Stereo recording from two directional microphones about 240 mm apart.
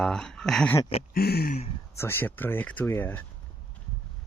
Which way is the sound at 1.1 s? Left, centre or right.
Left.